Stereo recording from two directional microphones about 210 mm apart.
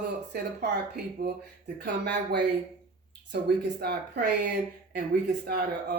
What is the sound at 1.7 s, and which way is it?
Speech, 55° right (ahead or behind).